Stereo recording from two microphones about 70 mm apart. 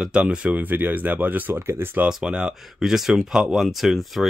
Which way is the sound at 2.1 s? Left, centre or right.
Centre.